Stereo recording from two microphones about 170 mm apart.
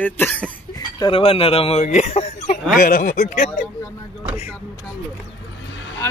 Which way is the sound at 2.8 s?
55° left (ahead or behind).